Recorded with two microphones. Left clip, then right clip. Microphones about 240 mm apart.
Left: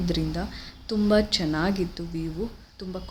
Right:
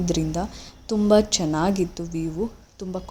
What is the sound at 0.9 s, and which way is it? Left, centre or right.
A woman's voice, centre.